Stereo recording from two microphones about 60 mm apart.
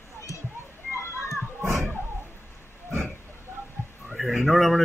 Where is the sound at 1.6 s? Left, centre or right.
Right.